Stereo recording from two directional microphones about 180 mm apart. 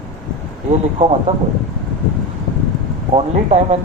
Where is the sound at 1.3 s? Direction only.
40° right (ahead or behind).